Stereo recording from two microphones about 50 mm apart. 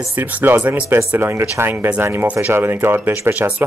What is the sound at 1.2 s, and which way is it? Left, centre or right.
Speech, right.